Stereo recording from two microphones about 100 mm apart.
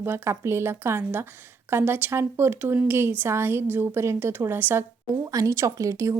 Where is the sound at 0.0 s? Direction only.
25° right (ahead or behind).